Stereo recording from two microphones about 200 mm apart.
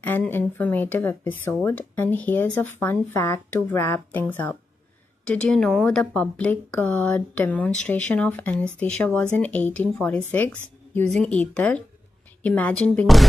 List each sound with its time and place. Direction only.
0.0 s speech: 10° left (ahead or behind)